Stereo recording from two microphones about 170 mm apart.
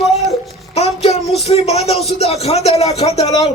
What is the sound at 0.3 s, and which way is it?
Babbling, 40° left (ahead or behind).